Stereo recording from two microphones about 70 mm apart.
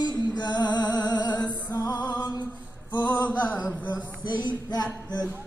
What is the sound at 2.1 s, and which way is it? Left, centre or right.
Music, left.